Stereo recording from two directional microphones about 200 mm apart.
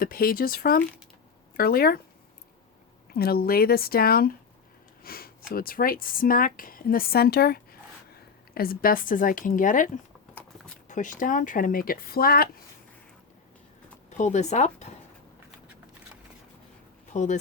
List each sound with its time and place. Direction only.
0.0 s speech: 45° left (ahead or behind)
3.1 s speech: 50° left (ahead or behind)
14.2 s speech: 35° left (ahead or behind)
17.2 s speech: 40° left (ahead or behind)